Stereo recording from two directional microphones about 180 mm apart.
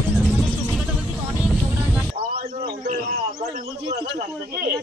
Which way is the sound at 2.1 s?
55° right (ahead or behind).